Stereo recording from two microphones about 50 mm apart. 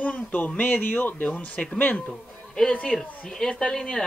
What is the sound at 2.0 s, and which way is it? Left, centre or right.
Speech, centre.